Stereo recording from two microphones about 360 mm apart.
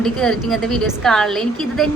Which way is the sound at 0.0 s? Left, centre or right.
Centre.